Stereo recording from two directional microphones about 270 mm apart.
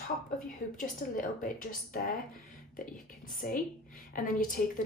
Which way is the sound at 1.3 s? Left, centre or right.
Left.